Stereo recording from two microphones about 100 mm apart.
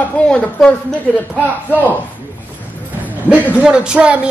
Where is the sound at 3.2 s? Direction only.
10° right (ahead or behind).